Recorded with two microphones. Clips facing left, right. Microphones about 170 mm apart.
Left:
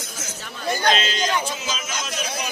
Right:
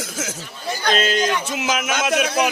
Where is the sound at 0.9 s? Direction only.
50° right (ahead or behind).